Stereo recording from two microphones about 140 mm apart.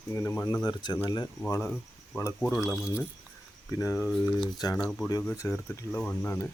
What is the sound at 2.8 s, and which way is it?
Speech, 20° left (ahead or behind).